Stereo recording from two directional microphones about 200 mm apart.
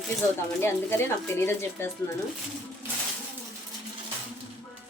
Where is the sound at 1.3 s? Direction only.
10° left (ahead or behind).